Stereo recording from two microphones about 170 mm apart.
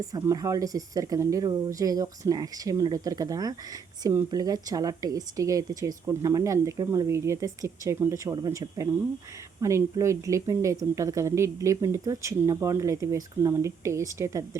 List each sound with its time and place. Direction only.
0.1 s speech: 20° right (ahead or behind)